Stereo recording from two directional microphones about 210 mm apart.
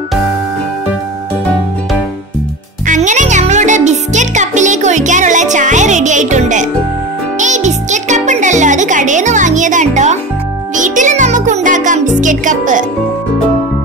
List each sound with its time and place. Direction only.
2.9 s music: 35° right (ahead or behind)